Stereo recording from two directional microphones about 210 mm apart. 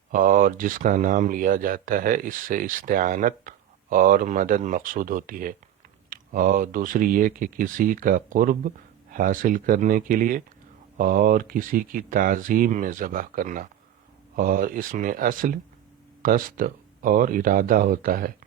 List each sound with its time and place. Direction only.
0.1 s speech: 40° right (ahead or behind)